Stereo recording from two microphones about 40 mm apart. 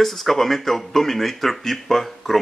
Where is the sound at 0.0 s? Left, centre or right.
Centre.